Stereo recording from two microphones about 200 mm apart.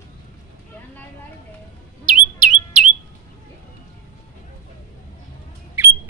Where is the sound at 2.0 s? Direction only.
40° right (ahead or behind).